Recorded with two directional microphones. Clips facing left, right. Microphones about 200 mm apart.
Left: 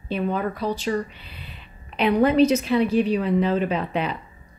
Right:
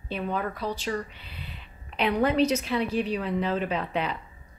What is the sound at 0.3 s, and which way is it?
Speech, 15° left (ahead or behind).